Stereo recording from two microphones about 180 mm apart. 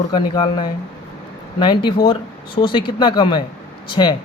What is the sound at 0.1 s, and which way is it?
Speech, 25° left (ahead or behind).